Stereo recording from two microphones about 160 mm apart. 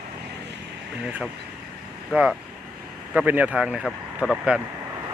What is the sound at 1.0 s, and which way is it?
Speech, 5° right (ahead or behind).